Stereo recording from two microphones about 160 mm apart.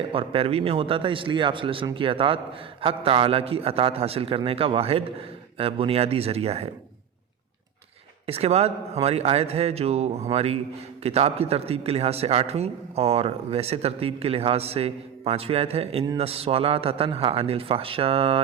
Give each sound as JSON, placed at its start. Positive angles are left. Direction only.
{"t": 0.1, "sound": "a man's voice", "side_deg": -35}
{"t": 8.3, "sound": "a man's voice", "side_deg": -40}